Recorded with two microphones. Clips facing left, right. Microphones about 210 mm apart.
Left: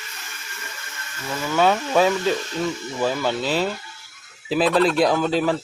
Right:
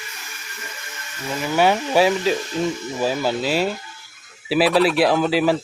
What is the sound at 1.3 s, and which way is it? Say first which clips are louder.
Speech: right 1 dB; 15° right (ahead or behind).